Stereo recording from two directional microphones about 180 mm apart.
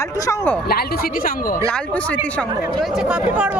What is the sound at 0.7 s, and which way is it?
Speech, 60° left (ahead or behind).